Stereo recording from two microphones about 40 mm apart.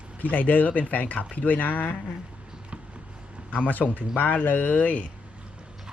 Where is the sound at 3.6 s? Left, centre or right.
Left.